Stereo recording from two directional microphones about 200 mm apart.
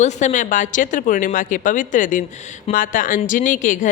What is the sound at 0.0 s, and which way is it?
Speech, 35° left (ahead or behind).